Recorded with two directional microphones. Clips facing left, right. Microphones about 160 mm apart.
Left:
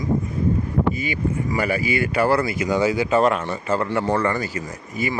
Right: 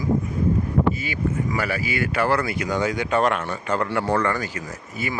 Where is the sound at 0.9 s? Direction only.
45° right (ahead or behind).